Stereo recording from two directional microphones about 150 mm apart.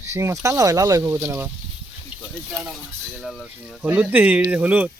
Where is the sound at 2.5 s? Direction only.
5° right (ahead or behind).